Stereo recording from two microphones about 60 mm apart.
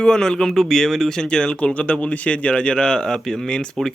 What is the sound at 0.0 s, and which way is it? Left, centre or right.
Speech, centre.